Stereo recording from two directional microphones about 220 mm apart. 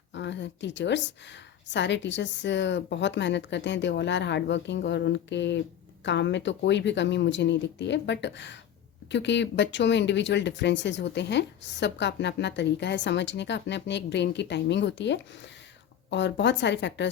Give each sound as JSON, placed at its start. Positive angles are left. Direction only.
{"t": 0.1, "sound": "speech", "side_deg": 55}